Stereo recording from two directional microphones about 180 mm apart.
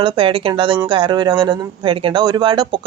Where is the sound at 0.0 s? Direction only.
30° right (ahead or behind).